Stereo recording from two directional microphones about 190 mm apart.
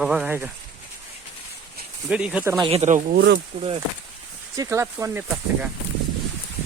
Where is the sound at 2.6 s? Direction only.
35° right (ahead or behind).